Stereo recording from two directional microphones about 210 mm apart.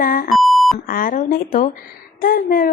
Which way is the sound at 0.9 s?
40° left (ahead or behind).